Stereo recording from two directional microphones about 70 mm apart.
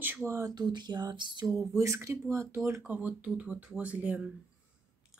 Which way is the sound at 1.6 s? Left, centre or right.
Right.